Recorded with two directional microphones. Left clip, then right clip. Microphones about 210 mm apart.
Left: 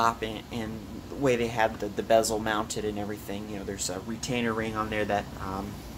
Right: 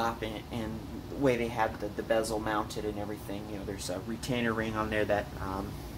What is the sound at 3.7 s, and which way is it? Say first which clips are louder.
Speech: left 2 dB; 10° left (ahead or behind).